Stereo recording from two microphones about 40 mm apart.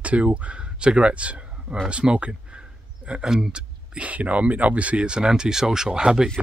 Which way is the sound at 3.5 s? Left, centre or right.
Right.